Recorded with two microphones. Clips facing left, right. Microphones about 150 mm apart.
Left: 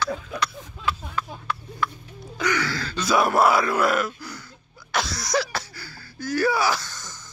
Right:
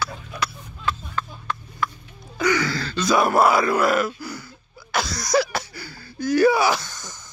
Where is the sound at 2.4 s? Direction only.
10° right (ahead or behind).